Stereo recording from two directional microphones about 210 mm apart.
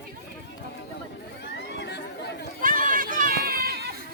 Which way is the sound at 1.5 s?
55° left (ahead or behind).